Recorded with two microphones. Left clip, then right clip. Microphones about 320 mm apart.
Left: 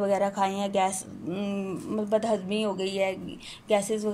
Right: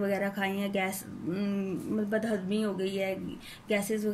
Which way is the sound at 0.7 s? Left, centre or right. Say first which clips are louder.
Left 6 dB; centre.